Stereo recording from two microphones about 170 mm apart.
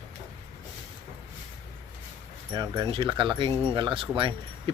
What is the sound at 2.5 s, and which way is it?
Speech, 25° right (ahead or behind).